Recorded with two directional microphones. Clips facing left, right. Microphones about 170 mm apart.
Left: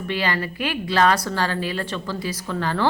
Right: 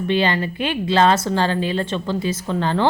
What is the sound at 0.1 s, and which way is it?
A woman's voice, 25° right (ahead or behind).